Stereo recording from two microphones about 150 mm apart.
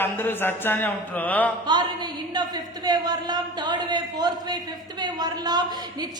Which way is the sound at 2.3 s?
25° right (ahead or behind).